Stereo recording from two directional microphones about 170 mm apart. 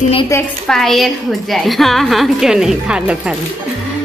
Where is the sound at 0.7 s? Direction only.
Centre (ahead or behind).